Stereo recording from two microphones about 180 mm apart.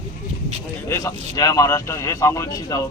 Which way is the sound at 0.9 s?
20° left (ahead or behind).